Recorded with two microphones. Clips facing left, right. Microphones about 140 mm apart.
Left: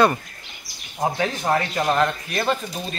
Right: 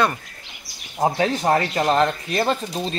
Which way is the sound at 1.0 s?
30° right (ahead or behind).